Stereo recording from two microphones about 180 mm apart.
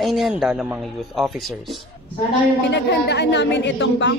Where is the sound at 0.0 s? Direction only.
Centre (ahead or behind).